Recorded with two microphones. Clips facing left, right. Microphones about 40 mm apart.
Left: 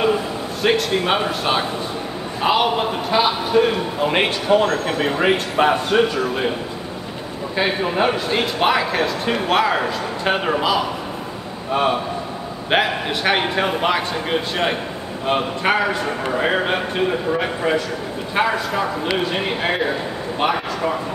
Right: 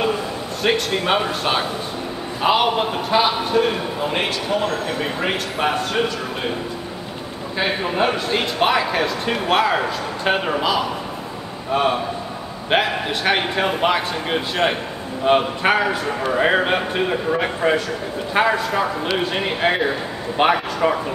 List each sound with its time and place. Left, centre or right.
0.6 s speech: centre
4.1 s a man's voice: left
5.2 s speech: centre
7.5 s speech: centre
20.4 s a man's voice: right